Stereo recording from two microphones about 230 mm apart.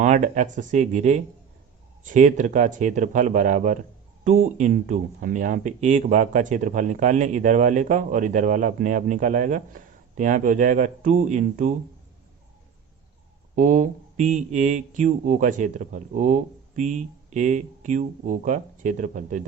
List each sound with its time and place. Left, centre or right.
0.0 s speech: right
13.6 s speech: right